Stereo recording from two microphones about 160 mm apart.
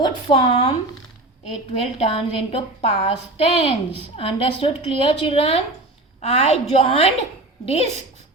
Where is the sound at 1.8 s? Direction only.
35° left (ahead or behind).